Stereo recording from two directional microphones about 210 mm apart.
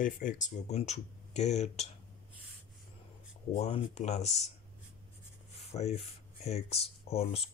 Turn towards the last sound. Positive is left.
turn(degrees=30)  # may be behind; listen again after turning